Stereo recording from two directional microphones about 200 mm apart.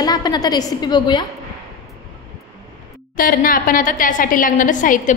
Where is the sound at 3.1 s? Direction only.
45° left (ahead or behind).